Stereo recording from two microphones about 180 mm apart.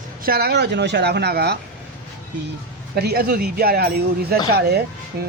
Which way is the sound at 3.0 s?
60° right (ahead or behind).